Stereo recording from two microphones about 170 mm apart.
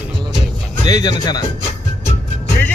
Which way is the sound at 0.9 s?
20° left (ahead or behind).